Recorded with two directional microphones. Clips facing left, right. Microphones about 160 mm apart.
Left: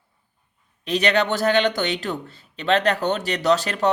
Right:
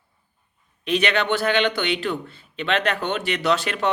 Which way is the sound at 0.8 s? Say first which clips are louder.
Left 2 dB; 40° left (ahead or behind).